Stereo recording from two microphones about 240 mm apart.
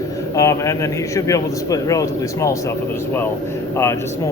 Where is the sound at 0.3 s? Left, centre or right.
Centre.